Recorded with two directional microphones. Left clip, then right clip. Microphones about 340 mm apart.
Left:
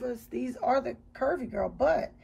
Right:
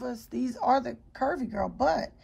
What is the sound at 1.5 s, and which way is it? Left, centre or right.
Speech, right.